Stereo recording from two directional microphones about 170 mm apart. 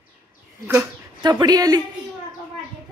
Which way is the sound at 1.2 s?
25° right (ahead or behind).